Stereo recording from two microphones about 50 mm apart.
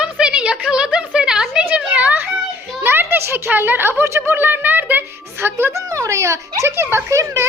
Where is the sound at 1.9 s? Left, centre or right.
Right.